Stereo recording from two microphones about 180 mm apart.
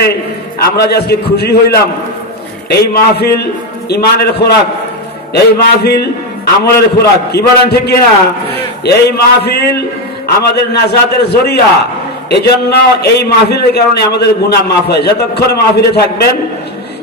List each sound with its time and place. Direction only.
0.7 s a man's voice: 65° left (ahead or behind)